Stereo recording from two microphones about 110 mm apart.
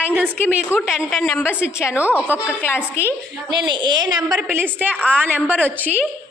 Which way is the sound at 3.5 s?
45° right (ahead or behind).